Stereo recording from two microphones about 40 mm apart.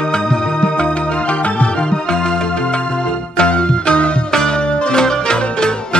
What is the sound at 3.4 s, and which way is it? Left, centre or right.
Music, left.